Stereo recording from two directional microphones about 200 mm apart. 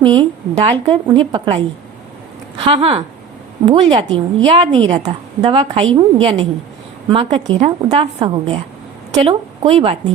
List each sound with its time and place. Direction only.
0.0 s a woman's voice: 25° right (ahead or behind)
2.6 s a woman's voice: 25° right (ahead or behind)